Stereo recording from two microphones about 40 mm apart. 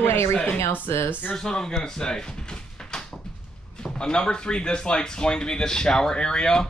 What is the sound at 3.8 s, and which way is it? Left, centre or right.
Speech, left.